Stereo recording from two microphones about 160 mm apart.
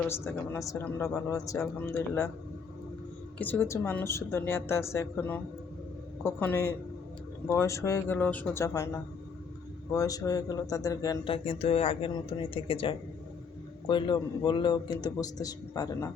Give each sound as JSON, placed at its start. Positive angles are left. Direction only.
{"t": 0.1, "sound": "speech", "side_deg": 15}
{"t": 3.3, "sound": "a man's voice", "side_deg": 10}
{"t": 11.3, "sound": "a man's voice", "side_deg": 40}